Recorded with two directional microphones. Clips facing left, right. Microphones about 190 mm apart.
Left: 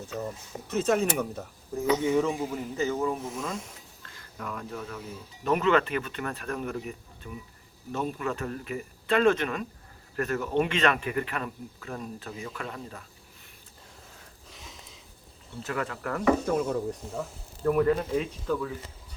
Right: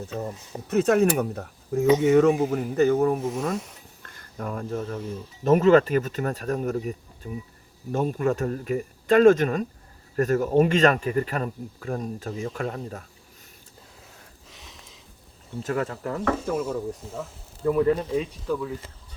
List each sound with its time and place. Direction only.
0.7 s speech: 60° right (ahead or behind)
2.5 s speech: 60° right (ahead or behind)
4.0 s a sound: 50° right (ahead or behind)
4.4 s speech: 40° right (ahead or behind)
7.9 s speech: 50° right (ahead or behind)
14.5 s a sound: centre (ahead or behind)
15.6 s speech: 40° right (ahead or behind)
16.5 s speech: 5° right (ahead or behind)
17.6 s speech: 15° right (ahead or behind)
18.4 s speech: 5° right (ahead or behind)